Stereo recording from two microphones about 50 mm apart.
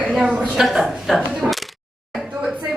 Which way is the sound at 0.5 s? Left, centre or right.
Centre.